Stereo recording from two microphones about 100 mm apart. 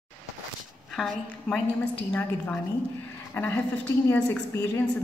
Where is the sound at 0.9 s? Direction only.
Centre (ahead or behind).